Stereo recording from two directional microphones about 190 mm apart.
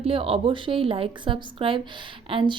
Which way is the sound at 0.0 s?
30° right (ahead or behind).